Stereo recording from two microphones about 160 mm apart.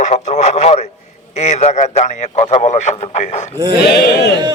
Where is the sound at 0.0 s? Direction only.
45° left (ahead or behind).